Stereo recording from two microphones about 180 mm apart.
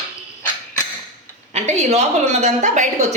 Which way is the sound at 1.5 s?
35° right (ahead or behind).